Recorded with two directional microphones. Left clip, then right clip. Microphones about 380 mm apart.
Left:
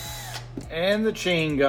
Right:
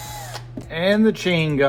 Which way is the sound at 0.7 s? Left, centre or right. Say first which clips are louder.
Right 5 dB; centre.